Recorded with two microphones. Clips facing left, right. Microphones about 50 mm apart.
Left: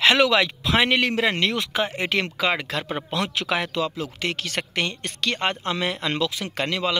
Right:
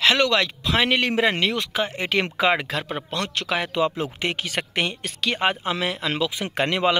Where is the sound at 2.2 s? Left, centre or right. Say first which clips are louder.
Right 3 dB; centre.